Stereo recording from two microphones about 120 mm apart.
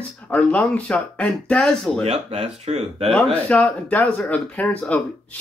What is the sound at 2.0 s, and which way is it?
Speech, 60° right (ahead or behind).